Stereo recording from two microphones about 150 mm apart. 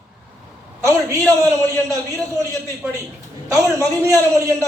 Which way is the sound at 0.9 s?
20° right (ahead or behind).